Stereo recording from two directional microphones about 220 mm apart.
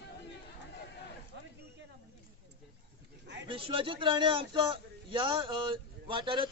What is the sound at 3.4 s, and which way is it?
A man's voice, 25° right (ahead or behind).